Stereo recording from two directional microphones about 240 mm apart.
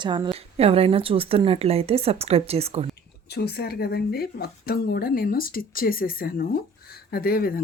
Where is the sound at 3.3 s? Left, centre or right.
Left.